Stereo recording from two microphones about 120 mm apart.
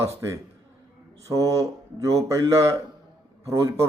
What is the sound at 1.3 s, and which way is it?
A man's voice, 25° right (ahead or behind).